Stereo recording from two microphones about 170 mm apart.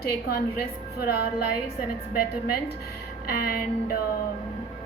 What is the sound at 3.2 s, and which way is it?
Speech, 60° left (ahead or behind).